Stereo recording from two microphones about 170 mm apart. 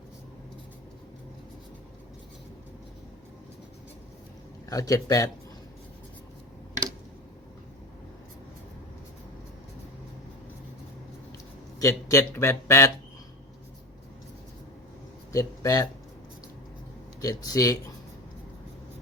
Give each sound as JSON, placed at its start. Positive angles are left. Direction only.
{"t": 4.7, "sound": "speech", "side_deg": 20}
{"t": 11.8, "sound": "speech", "side_deg": 20}
{"t": 15.3, "sound": "speech", "side_deg": 20}
{"t": 17.2, "sound": "speech", "side_deg": 20}